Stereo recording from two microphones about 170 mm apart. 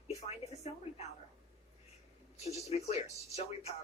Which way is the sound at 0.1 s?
40° left (ahead or behind).